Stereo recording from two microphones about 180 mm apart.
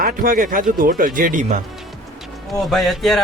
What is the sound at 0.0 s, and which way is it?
Speech, 50° right (ahead or behind).